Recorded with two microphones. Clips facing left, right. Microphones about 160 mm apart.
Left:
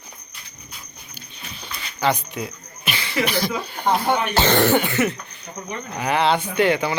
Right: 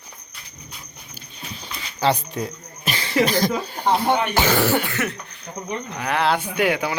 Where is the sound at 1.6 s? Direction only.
35° right (ahead or behind).